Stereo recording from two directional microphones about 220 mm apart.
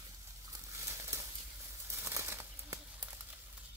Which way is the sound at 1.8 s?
10° right (ahead or behind).